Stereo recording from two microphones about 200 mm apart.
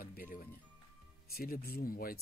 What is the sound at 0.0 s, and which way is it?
Music, 45° left (ahead or behind).